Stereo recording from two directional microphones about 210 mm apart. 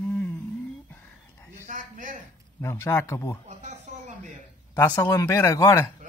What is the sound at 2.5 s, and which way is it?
Speech, 15° left (ahead or behind).